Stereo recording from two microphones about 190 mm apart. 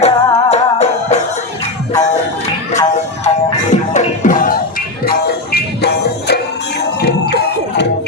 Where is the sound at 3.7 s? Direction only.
40° left (ahead or behind).